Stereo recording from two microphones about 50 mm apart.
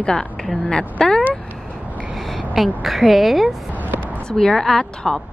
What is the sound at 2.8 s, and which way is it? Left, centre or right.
Speech, centre.